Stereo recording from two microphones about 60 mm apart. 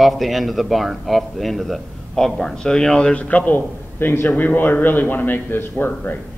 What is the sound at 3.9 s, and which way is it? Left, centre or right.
A man's voice, left.